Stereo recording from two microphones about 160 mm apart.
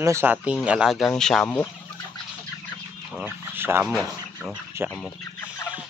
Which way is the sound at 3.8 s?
5° right (ahead or behind).